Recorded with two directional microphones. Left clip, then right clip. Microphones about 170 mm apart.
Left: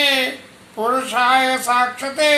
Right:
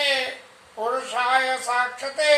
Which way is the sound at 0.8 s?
15° left (ahead or behind).